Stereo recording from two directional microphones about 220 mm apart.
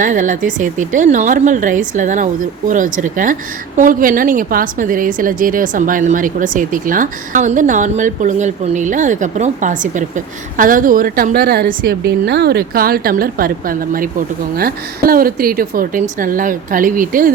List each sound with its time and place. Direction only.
0.0 s a woman's voice: 35° right (ahead or behind)